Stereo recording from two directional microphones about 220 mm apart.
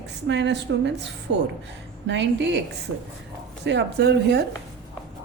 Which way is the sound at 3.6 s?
50° right (ahead or behind).